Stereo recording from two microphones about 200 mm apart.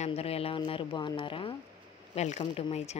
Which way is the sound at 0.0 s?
30° left (ahead or behind).